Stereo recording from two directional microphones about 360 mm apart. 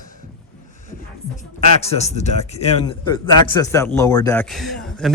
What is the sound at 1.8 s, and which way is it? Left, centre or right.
A man's voice, centre.